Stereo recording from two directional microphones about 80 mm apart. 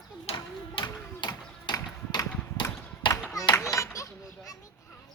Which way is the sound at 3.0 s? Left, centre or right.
Left.